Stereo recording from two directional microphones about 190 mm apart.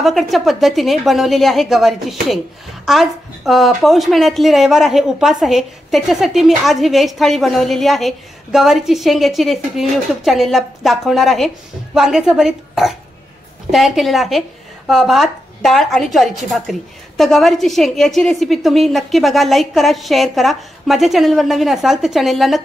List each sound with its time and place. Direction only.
0.0 s a woman's voice: centre (ahead or behind)